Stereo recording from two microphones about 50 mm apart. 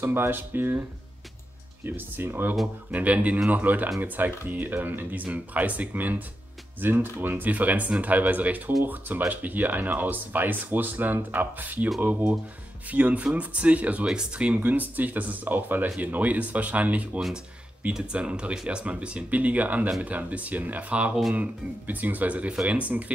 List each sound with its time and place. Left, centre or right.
0.0 s speech: right
1.9 s speech: right
2.9 s speech: right
14.0 s speech: centre